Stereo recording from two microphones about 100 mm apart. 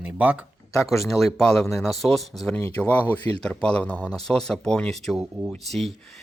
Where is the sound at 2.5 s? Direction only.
15° left (ahead or behind).